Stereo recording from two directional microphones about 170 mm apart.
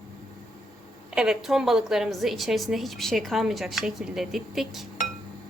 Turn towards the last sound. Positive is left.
turn(degrees=0)  # may be behind; listen again after turning